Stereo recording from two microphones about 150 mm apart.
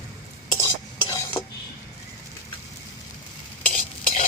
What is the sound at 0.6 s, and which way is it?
Stir, 20° left (ahead or behind).